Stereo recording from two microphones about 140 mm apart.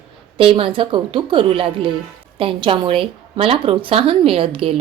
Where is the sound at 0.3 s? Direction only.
40° right (ahead or behind).